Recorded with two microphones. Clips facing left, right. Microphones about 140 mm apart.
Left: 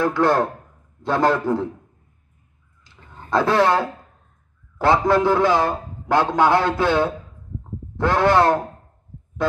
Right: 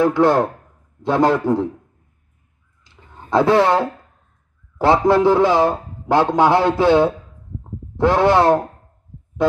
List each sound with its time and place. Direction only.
0.0 s a man's voice: 25° right (ahead or behind)
3.3 s a man's voice: 20° right (ahead or behind)